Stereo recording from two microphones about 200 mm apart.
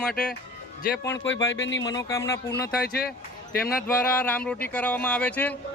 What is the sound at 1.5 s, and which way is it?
Speech, 65° left (ahead or behind).